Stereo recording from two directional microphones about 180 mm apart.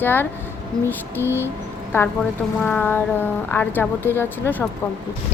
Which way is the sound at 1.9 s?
15° left (ahead or behind).